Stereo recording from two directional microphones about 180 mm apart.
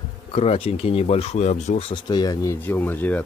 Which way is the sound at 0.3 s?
35° left (ahead or behind).